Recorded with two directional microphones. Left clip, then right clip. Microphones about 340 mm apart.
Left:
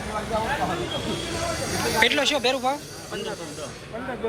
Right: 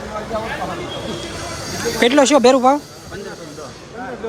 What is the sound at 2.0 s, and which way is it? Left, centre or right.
Speech, right.